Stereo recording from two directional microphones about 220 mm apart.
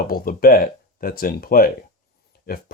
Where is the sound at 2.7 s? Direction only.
40° left (ahead or behind).